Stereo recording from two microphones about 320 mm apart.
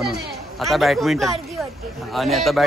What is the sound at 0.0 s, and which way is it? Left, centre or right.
A man's voice, centre.